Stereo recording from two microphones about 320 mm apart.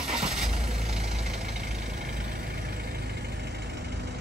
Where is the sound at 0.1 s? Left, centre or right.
Centre.